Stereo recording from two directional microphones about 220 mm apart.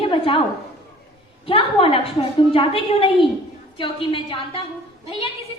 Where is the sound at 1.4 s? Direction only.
25° left (ahead or behind).